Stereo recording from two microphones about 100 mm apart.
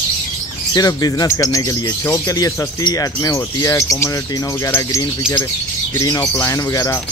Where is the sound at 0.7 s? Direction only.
40° left (ahead or behind).